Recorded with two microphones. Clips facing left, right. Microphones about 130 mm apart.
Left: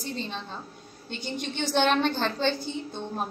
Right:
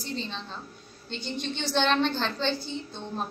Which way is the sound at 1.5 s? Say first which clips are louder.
Left 2 dB; 50° left (ahead or behind).